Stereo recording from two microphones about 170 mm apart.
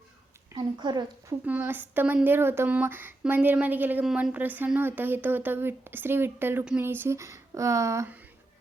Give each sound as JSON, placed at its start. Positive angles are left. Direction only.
{"t": 0.6, "sound": "a woman's voice", "side_deg": -25}
{"t": 1.5, "sound": "speech", "side_deg": -10}